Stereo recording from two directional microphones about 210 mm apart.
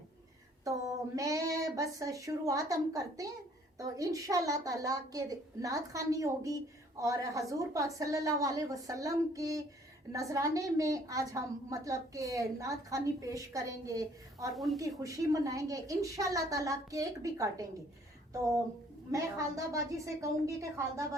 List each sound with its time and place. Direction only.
0.6 s a woman's voice: 15° right (ahead or behind)
14.5 s a woman's voice: centre (ahead or behind)
14.8 s a woman's voice: 15° right (ahead or behind)
19.1 s a woman's voice: 15° right (ahead or behind)